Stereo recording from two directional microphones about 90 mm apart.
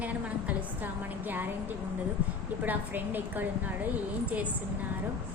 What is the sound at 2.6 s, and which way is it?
A woman's voice, 20° right (ahead or behind).